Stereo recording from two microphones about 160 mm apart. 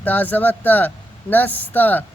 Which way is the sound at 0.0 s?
10° left (ahead or behind).